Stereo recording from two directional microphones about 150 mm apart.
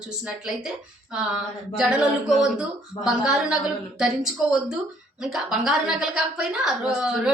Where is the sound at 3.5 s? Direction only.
5° right (ahead or behind).